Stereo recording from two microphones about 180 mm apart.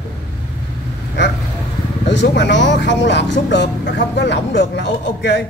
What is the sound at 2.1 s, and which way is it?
Speech, 75° left (ahead or behind).